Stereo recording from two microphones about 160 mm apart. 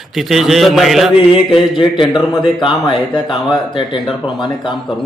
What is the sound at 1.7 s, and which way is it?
Speech, 30° left (ahead or behind).